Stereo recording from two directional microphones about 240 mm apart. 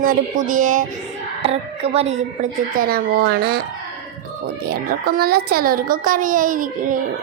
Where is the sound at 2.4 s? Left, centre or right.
Right.